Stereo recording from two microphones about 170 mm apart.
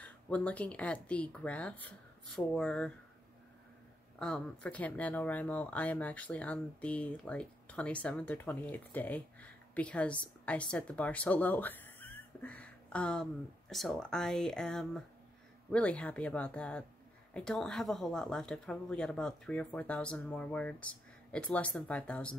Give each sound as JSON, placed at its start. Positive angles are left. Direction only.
{"t": 0.0, "sound": "speech", "side_deg": 10}
{"t": 4.2, "sound": "speech", "side_deg": 5}